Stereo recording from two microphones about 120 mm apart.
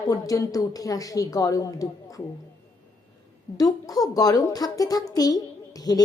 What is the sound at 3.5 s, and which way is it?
A child's voice, 30° left (ahead or behind).